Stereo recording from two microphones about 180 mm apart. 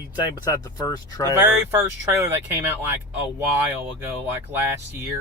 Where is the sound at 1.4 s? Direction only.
10° right (ahead or behind).